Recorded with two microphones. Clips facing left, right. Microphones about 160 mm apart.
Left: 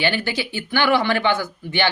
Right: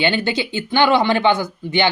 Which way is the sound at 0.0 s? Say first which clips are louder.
Right 3 dB; 25° right (ahead or behind).